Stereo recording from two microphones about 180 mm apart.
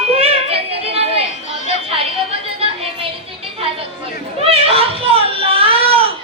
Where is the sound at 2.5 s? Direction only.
30° right (ahead or behind).